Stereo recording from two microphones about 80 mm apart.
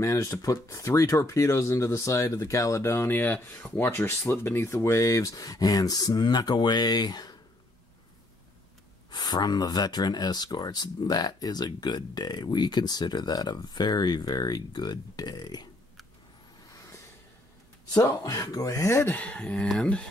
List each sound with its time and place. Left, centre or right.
0.0 s speech: left
9.1 s speech: left
17.9 s speech: left
19.1 s speech: centre